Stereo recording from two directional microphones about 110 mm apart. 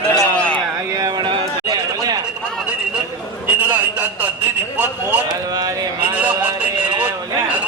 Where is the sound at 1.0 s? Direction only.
45° right (ahead or behind).